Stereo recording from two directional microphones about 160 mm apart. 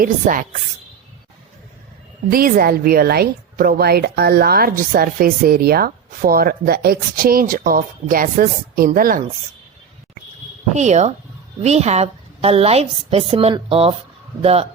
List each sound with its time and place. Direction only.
0.0 s a woman's voice: 55° right (ahead or behind)
2.3 s a woman's voice: 65° right (ahead or behind)
10.8 s a woman's voice: 45° right (ahead or behind)